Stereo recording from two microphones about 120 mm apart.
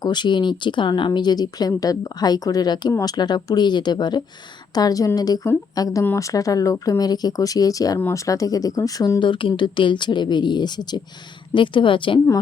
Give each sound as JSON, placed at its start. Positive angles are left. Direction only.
{"t": 0.0, "sound": "speech", "side_deg": 40}
{"t": 7.9, "sound": "speech", "side_deg": 20}
{"t": 8.3, "sound": "speech", "side_deg": 30}
{"t": 9.2, "sound": "speech", "side_deg": 45}